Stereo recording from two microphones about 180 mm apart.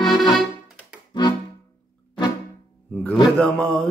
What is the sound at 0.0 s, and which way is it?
Accordion, 25° left (ahead or behind).